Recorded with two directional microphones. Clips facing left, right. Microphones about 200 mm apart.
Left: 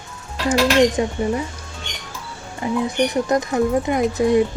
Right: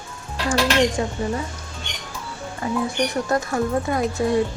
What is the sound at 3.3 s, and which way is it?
A woman's voice, 20° left (ahead or behind).